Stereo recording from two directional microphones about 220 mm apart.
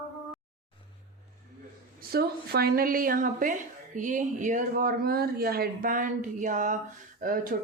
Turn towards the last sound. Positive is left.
turn(degrees=-35)  # may be behind; listen again after turning